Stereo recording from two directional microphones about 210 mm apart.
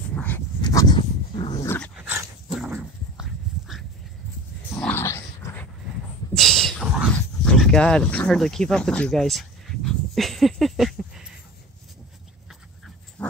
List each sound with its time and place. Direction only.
0.1 s dog: 10° left (ahead or behind)
0.6 s dog: 20° left (ahead or behind)
2.0 s dog: 5° right (ahead or behind)
4.7 s a sound: 10° left (ahead or behind)
6.3 s dog: centre (ahead or behind)
12.4 s dog: centre (ahead or behind)